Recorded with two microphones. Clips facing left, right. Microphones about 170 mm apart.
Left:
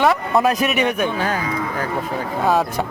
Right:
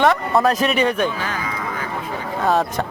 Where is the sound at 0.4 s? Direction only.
10° left (ahead or behind).